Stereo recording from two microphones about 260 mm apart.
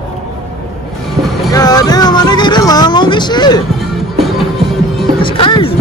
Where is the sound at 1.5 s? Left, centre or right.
Centre.